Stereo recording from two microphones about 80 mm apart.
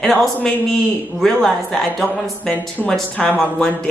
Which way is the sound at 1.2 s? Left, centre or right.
Centre.